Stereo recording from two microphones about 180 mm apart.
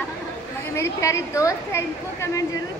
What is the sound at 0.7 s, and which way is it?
Speech, 15° left (ahead or behind).